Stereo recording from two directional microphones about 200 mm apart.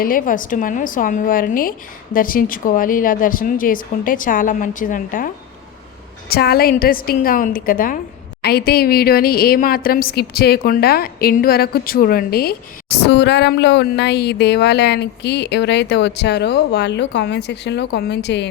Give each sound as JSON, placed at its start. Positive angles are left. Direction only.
{"t": 0.0, "sound": "a woman's voice", "side_deg": 45}